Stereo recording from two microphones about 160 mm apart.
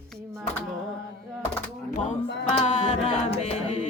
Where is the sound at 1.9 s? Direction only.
45° left (ahead or behind).